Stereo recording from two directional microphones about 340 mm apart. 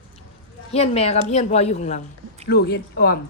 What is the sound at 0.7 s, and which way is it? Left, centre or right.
Speech, centre.